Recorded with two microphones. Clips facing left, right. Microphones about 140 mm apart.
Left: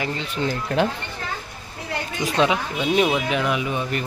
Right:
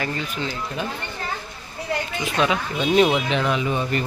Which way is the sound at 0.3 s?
45° left (ahead or behind).